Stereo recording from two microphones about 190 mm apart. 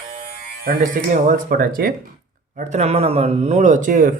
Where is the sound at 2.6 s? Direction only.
35° right (ahead or behind).